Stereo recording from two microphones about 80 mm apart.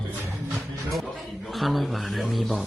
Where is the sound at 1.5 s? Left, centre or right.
Centre.